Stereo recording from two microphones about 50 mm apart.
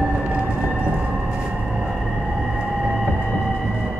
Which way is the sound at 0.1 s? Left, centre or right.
Right.